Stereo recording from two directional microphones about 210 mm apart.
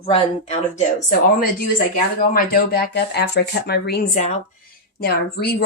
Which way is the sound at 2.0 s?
45° left (ahead or behind).